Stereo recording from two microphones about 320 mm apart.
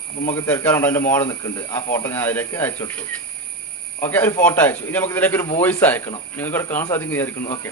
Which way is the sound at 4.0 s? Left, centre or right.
Centre.